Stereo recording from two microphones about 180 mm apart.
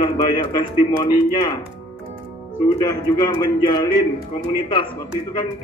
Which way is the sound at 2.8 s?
25° left (ahead or behind).